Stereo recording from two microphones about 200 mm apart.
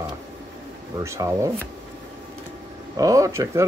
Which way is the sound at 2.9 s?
15° right (ahead or behind).